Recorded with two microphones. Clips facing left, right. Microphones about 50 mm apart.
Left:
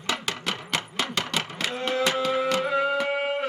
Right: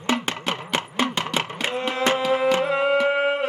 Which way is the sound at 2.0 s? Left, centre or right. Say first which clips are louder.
Right 3 dB; right.